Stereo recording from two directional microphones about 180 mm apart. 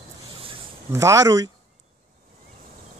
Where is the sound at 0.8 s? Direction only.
15° right (ahead or behind).